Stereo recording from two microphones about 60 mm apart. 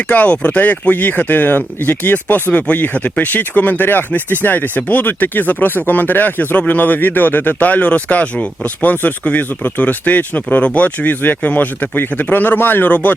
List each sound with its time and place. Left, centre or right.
0.1 s speech: left